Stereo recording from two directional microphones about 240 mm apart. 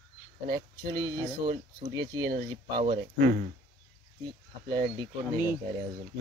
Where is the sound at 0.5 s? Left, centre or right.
Centre.